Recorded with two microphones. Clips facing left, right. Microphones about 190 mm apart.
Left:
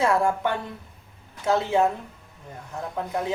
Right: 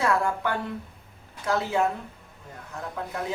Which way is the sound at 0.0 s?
25° left (ahead or behind).